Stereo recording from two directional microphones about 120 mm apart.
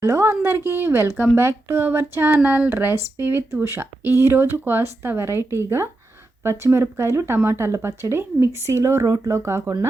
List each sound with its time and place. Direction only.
0.0 s a woman's voice: 20° right (ahead or behind)